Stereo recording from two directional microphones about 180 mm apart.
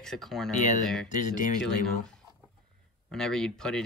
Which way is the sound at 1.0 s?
45° left (ahead or behind).